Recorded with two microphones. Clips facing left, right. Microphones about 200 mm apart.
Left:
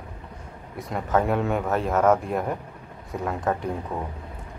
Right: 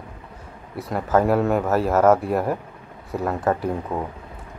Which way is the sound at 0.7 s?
5° right (ahead or behind).